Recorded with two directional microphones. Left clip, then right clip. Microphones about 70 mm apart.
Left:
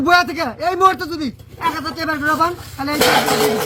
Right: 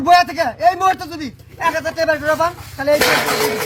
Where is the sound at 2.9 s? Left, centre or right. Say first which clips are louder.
Left 2 dB; left.